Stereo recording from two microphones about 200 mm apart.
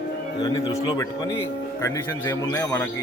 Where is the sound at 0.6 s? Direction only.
15° left (ahead or behind).